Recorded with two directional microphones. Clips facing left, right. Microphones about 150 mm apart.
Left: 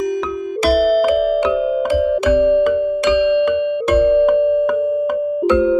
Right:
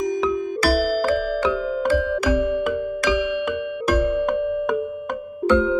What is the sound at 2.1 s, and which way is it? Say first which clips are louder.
Music: left 8 dB; 25° left (ahead or behind).